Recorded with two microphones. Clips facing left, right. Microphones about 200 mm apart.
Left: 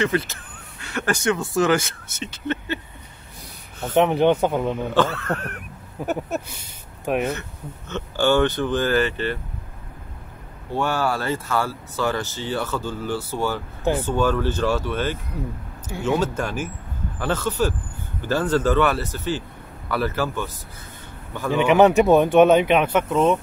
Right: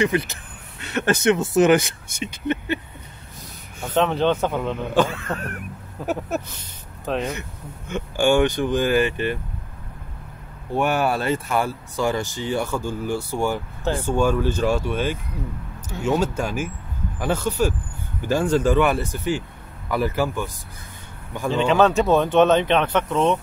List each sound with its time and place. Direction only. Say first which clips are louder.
0.0 s speech: right 1 dB; 15° right (ahead or behind)
3.9 s speech: left 3 dB; 15° left (ahead or behind)
4.9 s speech: right 2 dB; 15° right (ahead or behind)
6.0 s speech: even; 15° left (ahead or behind)
7.9 s speech: right 1 dB; 15° right (ahead or behind)
10.7 s speech: right 2 dB; 15° right (ahead or behind)
21.5 s speech: left 2 dB; 15° left (ahead or behind)